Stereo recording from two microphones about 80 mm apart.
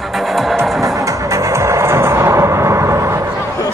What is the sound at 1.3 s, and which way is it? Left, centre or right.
Music, right.